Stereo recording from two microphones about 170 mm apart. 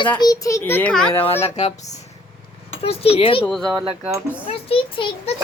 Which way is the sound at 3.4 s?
5° left (ahead or behind).